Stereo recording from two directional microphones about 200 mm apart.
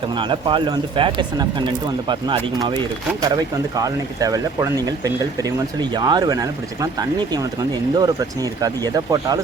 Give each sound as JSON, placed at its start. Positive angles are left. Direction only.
{"t": 0.2, "sound": "speech", "side_deg": -25}